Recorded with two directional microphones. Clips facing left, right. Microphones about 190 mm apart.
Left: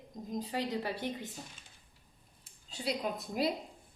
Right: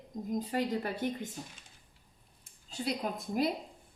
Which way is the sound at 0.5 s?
50° right (ahead or behind).